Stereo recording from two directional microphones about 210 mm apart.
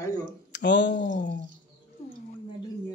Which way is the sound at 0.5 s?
55° left (ahead or behind).